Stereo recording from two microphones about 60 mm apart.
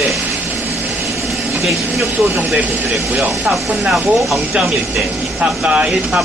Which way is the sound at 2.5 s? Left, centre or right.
Right.